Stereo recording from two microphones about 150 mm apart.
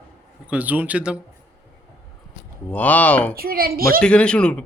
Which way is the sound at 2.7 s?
10° left (ahead or behind).